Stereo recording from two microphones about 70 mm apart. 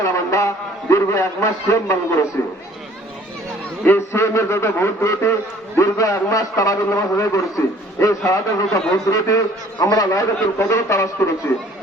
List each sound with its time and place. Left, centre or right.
0.0 s a man's voice: left
3.8 s a man's voice: left
9.8 s a man's voice: left
10.4 s a man's voice: left